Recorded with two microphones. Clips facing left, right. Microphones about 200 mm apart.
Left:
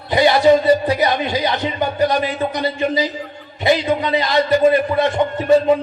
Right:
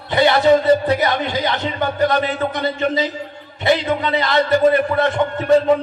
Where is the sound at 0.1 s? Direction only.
15° left (ahead or behind).